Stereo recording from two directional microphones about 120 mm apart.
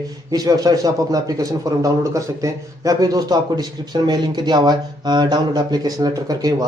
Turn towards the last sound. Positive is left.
turn(degrees=-30)  # may be behind; listen again after turning